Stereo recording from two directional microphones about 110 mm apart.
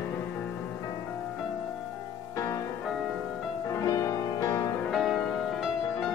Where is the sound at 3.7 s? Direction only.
30° left (ahead or behind).